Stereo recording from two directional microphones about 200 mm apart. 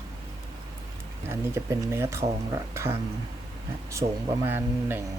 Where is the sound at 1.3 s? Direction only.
10° right (ahead or behind).